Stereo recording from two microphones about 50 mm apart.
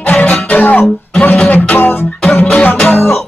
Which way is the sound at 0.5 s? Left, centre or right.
Left.